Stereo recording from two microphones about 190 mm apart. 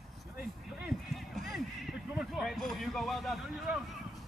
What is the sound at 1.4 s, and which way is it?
Speech, centre (ahead or behind).